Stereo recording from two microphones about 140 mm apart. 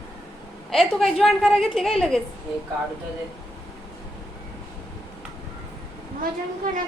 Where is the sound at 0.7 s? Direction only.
Centre (ahead or behind).